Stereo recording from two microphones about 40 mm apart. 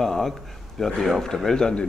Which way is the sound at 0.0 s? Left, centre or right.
Centre.